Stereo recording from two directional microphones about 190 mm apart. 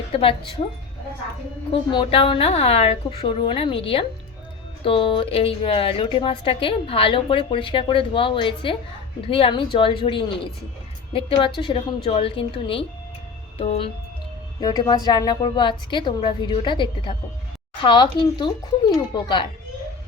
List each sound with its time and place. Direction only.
0.1 s speech: 30° left (ahead or behind)
1.7 s speech: 25° left (ahead or behind)
13.6 s music: 30° left (ahead or behind)
14.6 s speech: 20° left (ahead or behind)